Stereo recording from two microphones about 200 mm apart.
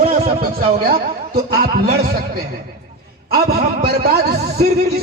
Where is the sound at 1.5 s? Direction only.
50° right (ahead or behind).